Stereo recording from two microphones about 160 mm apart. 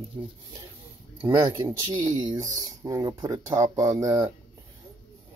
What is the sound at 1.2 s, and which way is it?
Speech, 20° right (ahead or behind).